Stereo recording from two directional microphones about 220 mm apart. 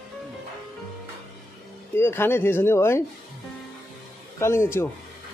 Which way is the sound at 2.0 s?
10° left (ahead or behind).